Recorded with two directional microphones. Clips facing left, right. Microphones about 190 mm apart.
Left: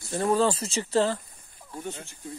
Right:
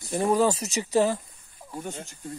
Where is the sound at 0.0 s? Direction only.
15° right (ahead or behind).